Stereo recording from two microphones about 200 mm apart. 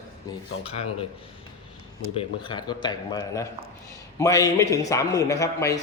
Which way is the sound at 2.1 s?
25° left (ahead or behind).